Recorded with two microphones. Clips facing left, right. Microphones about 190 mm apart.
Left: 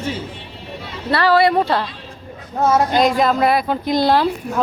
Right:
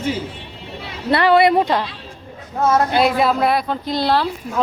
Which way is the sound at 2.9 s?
5° right (ahead or behind).